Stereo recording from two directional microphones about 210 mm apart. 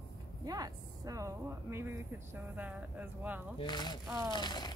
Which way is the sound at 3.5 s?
20° left (ahead or behind).